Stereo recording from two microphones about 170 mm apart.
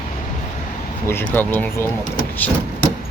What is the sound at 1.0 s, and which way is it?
Speech, 15° left (ahead or behind).